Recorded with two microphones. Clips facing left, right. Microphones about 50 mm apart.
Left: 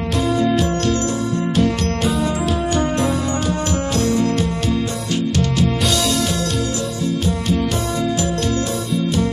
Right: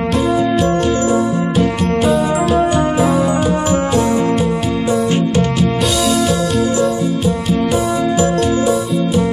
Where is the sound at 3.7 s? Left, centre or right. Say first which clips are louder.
Right 4 dB; right.